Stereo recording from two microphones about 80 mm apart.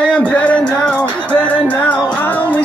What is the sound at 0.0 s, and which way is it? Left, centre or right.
Music, centre.